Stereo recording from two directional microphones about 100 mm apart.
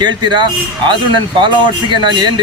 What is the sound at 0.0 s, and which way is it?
Speech, 50° right (ahead or behind).